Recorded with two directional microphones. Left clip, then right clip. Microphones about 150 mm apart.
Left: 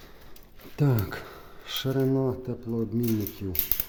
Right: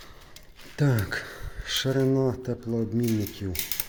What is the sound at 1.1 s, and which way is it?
Speech, 15° left (ahead or behind).